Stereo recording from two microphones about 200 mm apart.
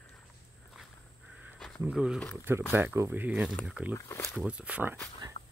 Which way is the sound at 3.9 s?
15° left (ahead or behind).